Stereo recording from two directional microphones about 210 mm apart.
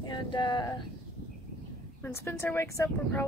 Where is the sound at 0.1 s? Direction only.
20° left (ahead or behind).